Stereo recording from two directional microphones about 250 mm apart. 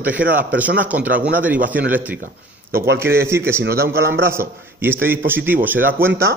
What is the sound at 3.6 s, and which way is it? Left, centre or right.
Speech, right.